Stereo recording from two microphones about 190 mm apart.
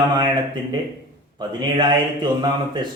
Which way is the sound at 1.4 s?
25° right (ahead or behind).